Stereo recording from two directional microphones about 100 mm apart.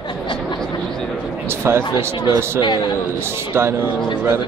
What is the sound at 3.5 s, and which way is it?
Speech, 25° right (ahead or behind).